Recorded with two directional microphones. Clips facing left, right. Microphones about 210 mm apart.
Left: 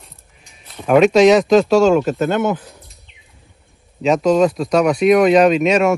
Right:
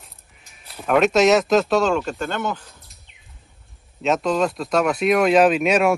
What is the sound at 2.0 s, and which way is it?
Speech, 50° left (ahead or behind).